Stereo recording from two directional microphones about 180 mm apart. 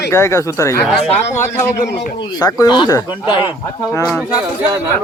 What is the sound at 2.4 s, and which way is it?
Speech, 25° left (ahead or behind).